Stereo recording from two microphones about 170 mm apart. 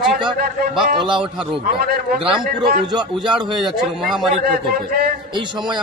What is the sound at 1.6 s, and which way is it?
Speech, 65° right (ahead or behind).